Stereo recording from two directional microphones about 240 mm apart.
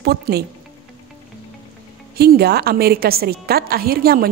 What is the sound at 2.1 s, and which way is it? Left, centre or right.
A woman's voice, right.